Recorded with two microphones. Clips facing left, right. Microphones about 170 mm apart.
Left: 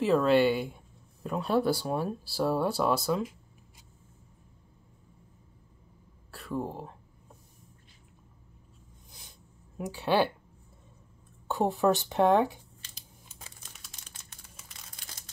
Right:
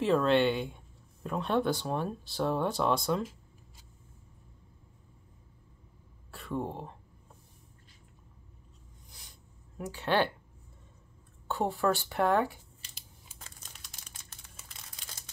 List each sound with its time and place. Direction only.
0.0 s speech: 5° left (ahead or behind)
6.3 s speech: centre (ahead or behind)
9.8 s speech: 15° left (ahead or behind)
11.4 s speech: 15° left (ahead or behind)
12.8 s a sound: 10° right (ahead or behind)
13.6 s crumpling: centre (ahead or behind)